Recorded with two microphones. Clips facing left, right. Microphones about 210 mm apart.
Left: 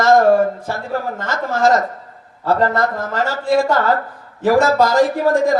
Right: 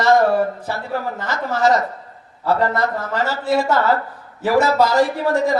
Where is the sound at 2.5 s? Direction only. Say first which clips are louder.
Left 2 dB; 45° left (ahead or behind).